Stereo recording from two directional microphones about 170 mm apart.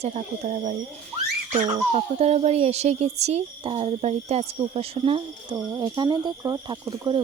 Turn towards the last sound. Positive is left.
turn(degrees=-25)  # may be behind; listen again after turning